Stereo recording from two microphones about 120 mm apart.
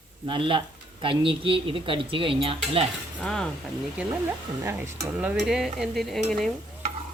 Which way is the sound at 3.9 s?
20° right (ahead or behind).